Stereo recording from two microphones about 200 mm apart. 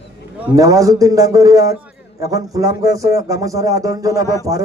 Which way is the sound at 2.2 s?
15° right (ahead or behind).